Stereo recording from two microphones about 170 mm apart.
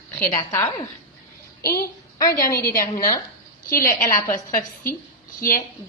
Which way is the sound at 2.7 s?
55° left (ahead or behind).